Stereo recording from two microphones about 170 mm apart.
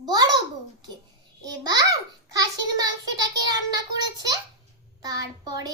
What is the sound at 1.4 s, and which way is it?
Speech, 20° right (ahead or behind).